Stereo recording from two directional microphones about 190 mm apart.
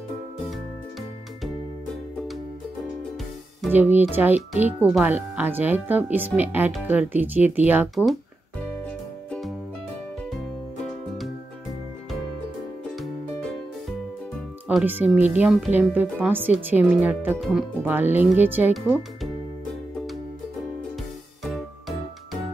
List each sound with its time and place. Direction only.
3.7 s speech: 10° right (ahead or behind)
10.3 s music: centre (ahead or behind)
13.0 s music: centre (ahead or behind)
14.7 s speech: 5° right (ahead or behind)
21.5 s music: centre (ahead or behind)